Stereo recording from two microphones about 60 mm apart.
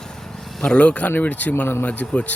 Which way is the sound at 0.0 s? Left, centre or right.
Centre.